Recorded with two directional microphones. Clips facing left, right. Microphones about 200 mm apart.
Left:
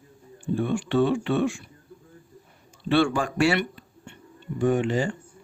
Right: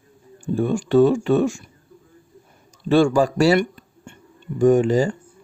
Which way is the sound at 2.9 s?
40° right (ahead or behind).